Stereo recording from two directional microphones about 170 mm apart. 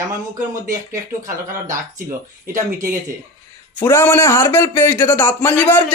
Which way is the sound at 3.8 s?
15° left (ahead or behind).